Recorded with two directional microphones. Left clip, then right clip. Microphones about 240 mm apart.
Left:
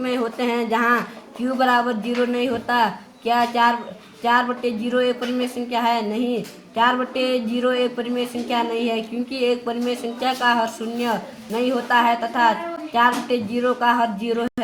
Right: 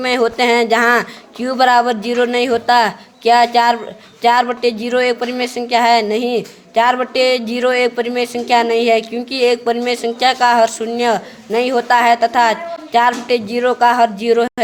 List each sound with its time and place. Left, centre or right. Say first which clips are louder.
0.0 s a woman's voice: right 9 dB; right